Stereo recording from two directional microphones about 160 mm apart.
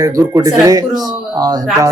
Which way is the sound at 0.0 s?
20° right (ahead or behind).